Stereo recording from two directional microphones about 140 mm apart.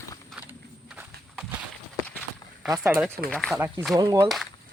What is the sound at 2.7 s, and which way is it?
Speech, 15° right (ahead or behind).